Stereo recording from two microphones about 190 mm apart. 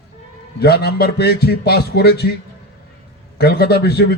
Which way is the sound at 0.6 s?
60° left (ahead or behind).